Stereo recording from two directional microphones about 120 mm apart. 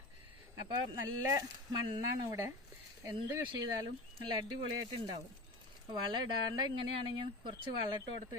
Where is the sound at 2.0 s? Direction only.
30° right (ahead or behind).